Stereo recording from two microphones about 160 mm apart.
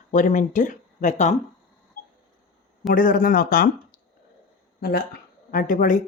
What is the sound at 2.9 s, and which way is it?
Speech, 60° left (ahead or behind).